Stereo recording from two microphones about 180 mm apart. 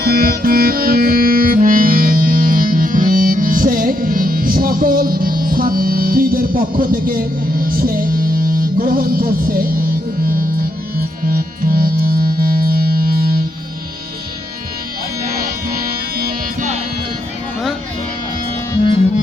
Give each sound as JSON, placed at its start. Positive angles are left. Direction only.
{"t": 0.0, "sound": "music", "side_deg": -55}
{"t": 15.4, "sound": "music", "side_deg": -55}